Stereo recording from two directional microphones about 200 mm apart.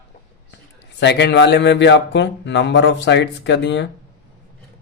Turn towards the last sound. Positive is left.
turn(degrees=60)  # may be behind; listen again after turning